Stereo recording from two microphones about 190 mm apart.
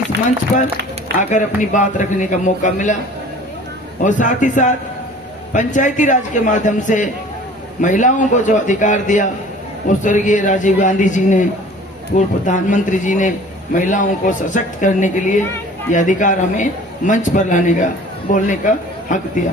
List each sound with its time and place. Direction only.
0.1 s speech: 65° right (ahead or behind)
1.3 s a man's voice: 40° left (ahead or behind)
4.0 s a man's voice: 40° left (ahead or behind)